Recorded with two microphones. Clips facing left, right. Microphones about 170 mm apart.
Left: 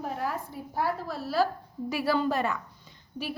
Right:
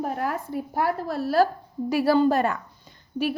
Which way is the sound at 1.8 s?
40° right (ahead or behind).